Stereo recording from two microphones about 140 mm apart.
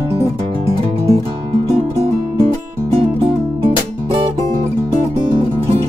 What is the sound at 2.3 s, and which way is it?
Music, 40° right (ahead or behind).